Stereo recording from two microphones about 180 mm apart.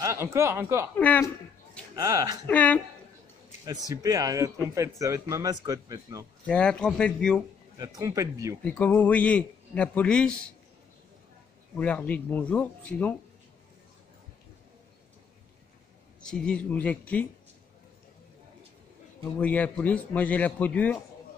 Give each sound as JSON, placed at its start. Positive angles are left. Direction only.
{"t": 0.0, "sound": "speech", "side_deg": -15}
{"t": 0.9, "sound": "a man's voice", "side_deg": 10}
{"t": 2.0, "sound": "speech", "side_deg": -20}
{"t": 2.4, "sound": "a man's voice", "side_deg": 10}
{"t": 3.9, "sound": "speech", "side_deg": -20}
{"t": 6.4, "sound": "a man's voice", "side_deg": 5}
{"t": 7.8, "sound": "speech", "side_deg": -20}
{"t": 8.6, "sound": "a man's voice", "side_deg": 10}
{"t": 11.7, "sound": "a man's voice", "side_deg": 10}
{"t": 16.2, "sound": "a man's voice", "side_deg": 5}
{"t": 19.3, "sound": "a man's voice", "side_deg": 10}